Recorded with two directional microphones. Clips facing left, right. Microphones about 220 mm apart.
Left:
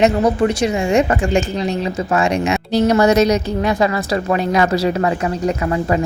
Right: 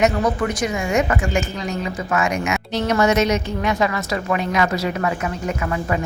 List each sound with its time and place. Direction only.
0.0 s a woman's voice: 30° left (ahead or behind)